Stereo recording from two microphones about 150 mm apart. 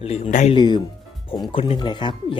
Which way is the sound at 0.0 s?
45° left (ahead or behind).